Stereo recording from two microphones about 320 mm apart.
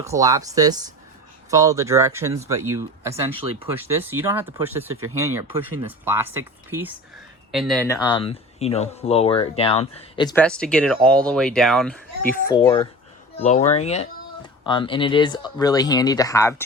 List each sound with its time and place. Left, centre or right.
0.0 s speech: centre